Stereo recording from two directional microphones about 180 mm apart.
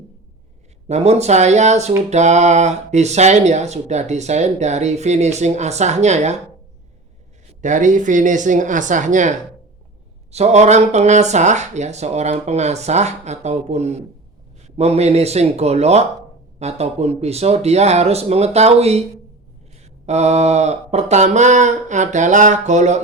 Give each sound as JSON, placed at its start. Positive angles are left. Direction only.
{"t": 0.9, "sound": "speech", "side_deg": -35}
{"t": 7.6, "sound": "speech", "side_deg": -45}
{"t": 20.1, "sound": "speech", "side_deg": -40}